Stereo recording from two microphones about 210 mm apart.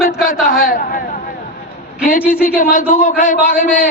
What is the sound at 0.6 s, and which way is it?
Speech, 45° left (ahead or behind).